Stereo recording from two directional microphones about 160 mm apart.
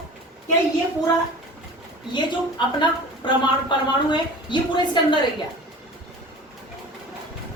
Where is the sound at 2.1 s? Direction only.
30° left (ahead or behind).